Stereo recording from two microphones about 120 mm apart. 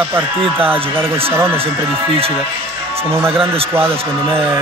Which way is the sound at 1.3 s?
20° right (ahead or behind).